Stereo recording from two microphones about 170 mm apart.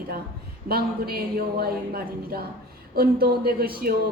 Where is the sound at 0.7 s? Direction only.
65° right (ahead or behind).